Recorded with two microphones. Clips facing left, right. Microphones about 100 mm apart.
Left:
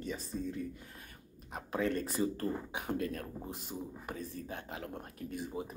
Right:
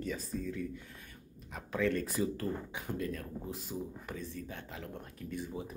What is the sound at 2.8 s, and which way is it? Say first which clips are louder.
Speech: left 2 dB; 55° left (ahead or behind).